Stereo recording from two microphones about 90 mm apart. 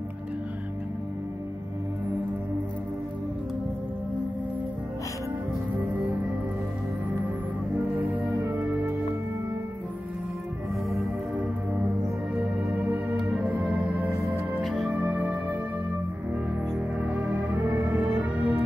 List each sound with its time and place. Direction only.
5.8 s music: 15° right (ahead or behind)
7.7 s music: 15° right (ahead or behind)
11.3 s music: 15° right (ahead or behind)
17.0 s music: 20° right (ahead or behind)